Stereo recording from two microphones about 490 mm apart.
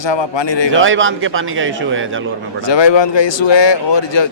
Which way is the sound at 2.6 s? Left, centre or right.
Left.